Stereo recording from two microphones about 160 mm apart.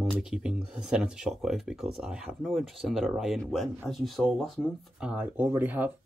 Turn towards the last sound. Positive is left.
turn(degrees=-10)  # may be behind; listen again after turning